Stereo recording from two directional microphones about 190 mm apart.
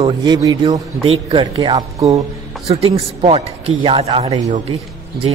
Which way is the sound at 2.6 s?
30° right (ahead or behind).